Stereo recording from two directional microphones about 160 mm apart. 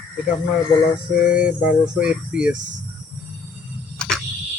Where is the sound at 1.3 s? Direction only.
5° right (ahead or behind).